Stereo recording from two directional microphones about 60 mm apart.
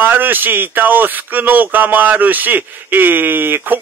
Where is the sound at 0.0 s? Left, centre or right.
Right.